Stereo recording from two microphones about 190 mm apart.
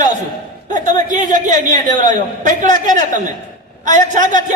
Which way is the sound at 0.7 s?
40° right (ahead or behind).